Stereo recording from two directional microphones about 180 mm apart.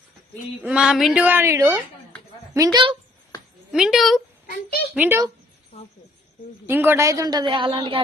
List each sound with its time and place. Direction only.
0.6 s speech: 5° right (ahead or behind)
3.7 s a woman's voice: centre (ahead or behind)
4.4 s a child's voice: 60° left (ahead or behind)
4.9 s speech: 15° right (ahead or behind)
5.7 s speech: 35° left (ahead or behind)
6.7 s a man's voice: 10° right (ahead or behind); by 8.0 s 30° right (ahead or behind)